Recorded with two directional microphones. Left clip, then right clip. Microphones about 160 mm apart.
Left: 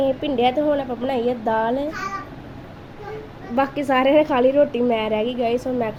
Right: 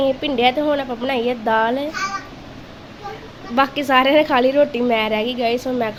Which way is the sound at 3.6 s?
5° left (ahead or behind).